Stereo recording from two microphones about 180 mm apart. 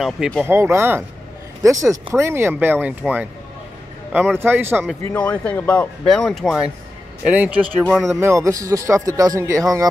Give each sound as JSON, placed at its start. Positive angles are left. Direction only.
{"t": 0.0, "sound": "speech", "side_deg": 0}
{"t": 0.5, "sound": "speech", "side_deg": -15}
{"t": 5.1, "sound": "speech", "side_deg": 10}
{"t": 8.2, "sound": "speech", "side_deg": -15}